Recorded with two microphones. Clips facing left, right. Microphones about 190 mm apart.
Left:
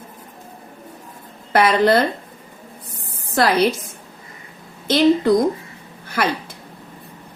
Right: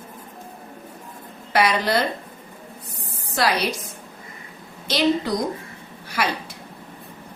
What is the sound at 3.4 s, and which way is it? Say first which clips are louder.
Speech: left 4 dB; 55° left (ahead or behind).